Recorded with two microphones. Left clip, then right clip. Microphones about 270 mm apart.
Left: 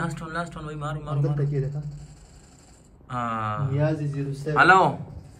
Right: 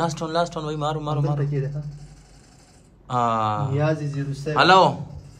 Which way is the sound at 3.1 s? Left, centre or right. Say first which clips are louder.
Right 7 dB; centre.